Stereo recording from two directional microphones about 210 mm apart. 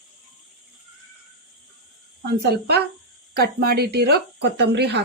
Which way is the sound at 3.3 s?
45° right (ahead or behind).